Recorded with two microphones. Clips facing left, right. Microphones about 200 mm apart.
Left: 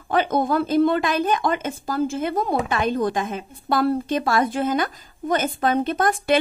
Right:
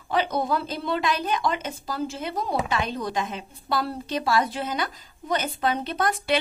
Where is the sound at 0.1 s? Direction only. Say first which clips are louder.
Left 4 dB; 50° left (ahead or behind).